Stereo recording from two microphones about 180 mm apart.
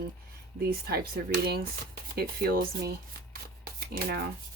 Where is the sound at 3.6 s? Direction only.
60° right (ahead or behind).